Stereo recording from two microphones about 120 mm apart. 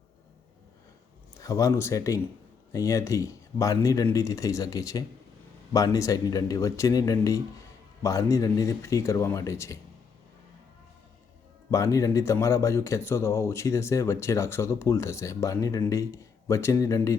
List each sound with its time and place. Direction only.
1.4 s speech: 30° left (ahead or behind)
11.7 s speech: 25° left (ahead or behind)